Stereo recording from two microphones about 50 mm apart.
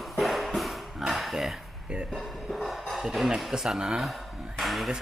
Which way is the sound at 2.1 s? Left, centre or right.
Centre.